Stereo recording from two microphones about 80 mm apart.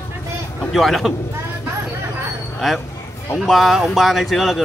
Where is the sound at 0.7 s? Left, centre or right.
Centre.